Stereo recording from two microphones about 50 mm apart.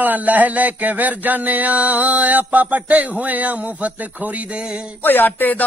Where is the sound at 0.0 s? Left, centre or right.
Right.